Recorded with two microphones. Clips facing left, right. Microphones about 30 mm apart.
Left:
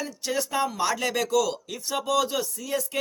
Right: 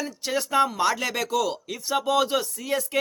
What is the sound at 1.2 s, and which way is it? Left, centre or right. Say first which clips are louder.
Speech: left 1 dB; right.